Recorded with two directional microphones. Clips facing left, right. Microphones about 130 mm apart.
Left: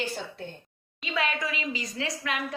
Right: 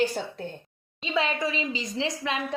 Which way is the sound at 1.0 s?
25° right (ahead or behind).